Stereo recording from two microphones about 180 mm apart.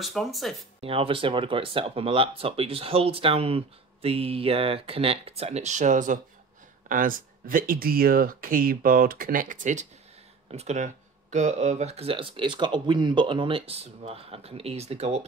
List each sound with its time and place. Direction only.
0.0 s speech: centre (ahead or behind)
0.7 s speech: 30° right (ahead or behind)